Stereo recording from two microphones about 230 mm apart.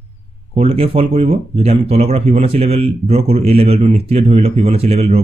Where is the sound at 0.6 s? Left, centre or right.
Right.